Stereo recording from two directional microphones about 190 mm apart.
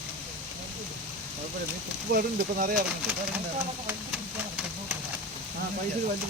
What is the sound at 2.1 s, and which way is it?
Speech, 50° right (ahead or behind).